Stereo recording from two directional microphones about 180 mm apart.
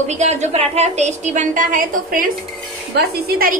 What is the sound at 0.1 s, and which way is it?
A woman's voice, 40° right (ahead or behind).